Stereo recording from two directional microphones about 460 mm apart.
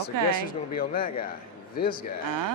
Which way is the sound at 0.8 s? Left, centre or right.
Centre.